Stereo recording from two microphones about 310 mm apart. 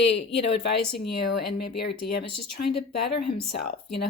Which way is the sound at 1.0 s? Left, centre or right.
Left.